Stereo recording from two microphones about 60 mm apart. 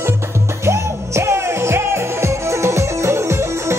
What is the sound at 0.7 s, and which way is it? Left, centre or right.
Music, right.